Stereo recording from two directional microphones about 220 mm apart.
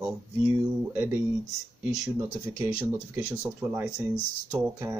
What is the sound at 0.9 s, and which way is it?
Speech, 10° right (ahead or behind).